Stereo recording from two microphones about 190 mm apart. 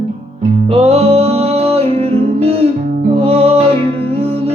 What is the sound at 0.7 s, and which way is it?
Music, 35° right (ahead or behind).